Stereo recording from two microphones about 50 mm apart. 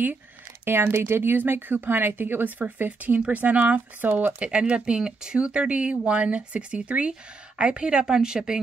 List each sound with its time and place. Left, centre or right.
0.7 s speech: right
4.5 s speech: right